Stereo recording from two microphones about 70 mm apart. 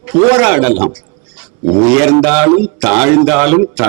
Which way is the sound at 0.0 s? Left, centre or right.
Right.